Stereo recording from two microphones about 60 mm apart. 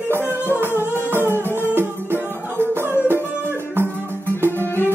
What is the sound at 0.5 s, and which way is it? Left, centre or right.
Music, right.